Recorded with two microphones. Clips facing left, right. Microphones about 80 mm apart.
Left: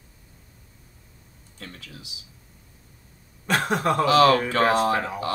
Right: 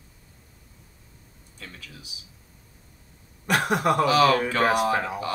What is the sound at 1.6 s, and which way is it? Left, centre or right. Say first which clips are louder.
Speech: left 2 dB; left.